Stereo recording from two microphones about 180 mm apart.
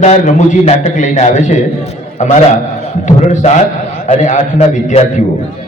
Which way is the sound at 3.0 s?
40° left (ahead or behind).